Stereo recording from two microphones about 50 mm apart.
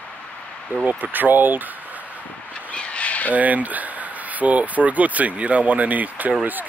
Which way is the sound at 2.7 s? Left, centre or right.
Left.